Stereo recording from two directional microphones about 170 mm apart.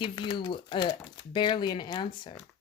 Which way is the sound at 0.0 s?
25° left (ahead or behind).